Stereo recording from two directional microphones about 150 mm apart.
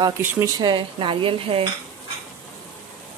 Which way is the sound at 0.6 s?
35° right (ahead or behind).